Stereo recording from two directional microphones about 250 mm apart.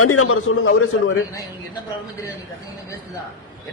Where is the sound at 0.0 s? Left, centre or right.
Left.